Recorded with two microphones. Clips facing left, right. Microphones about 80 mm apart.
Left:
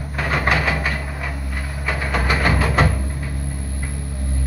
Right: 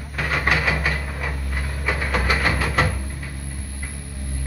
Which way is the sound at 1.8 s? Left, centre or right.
Centre.